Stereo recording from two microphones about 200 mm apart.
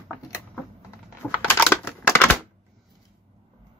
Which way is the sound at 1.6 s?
10° left (ahead or behind).